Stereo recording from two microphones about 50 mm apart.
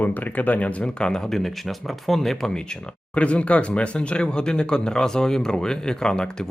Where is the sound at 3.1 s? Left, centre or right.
Left.